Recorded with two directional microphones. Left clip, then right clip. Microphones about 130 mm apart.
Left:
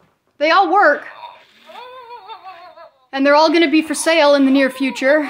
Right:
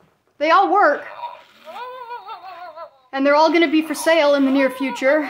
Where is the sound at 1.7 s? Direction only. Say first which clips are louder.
Right 3 dB; 45° right (ahead or behind).